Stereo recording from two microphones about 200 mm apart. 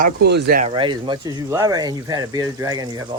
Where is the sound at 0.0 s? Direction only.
55° right (ahead or behind).